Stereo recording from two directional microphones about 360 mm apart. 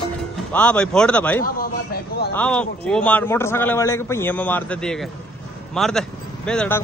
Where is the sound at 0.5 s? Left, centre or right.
Centre.